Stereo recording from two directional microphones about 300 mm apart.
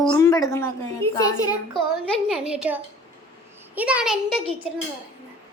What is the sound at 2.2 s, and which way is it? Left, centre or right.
A woman's voice, centre.